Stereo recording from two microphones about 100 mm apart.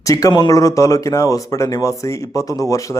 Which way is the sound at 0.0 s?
35° left (ahead or behind).